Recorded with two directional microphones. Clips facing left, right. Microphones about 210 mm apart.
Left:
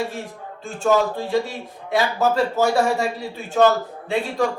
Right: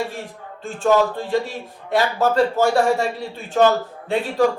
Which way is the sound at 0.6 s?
Centre (ahead or behind).